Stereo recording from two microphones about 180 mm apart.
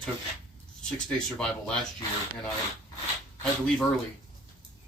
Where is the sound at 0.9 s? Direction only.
5° left (ahead or behind).